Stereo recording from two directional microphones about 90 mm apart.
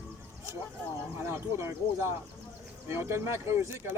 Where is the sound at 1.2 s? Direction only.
30° right (ahead or behind).